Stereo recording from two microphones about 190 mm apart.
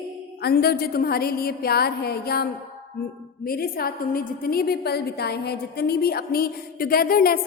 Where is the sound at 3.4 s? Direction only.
50° left (ahead or behind).